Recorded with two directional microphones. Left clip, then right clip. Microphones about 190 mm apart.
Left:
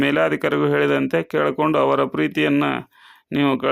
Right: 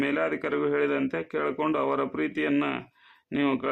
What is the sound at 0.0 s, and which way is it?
Speech, 40° left (ahead or behind).